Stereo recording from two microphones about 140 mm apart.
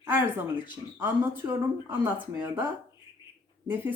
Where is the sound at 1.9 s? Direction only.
15° right (ahead or behind).